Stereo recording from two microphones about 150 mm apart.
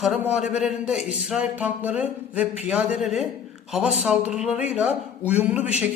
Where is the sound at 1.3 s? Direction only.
10° right (ahead or behind).